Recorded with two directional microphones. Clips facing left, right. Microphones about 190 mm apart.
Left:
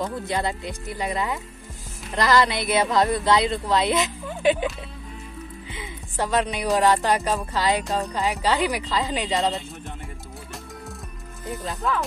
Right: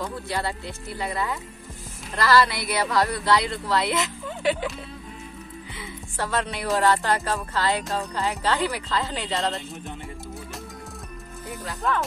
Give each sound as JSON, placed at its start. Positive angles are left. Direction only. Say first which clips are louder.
{"t": 0.0, "sound": "speech", "louder": "left 3 dB", "side_deg": 20}
{"t": 5.7, "sound": "music", "louder": "left 1 dB", "side_deg": 15}
{"t": 11.8, "sound": "speech", "louder": "even", "side_deg": 0}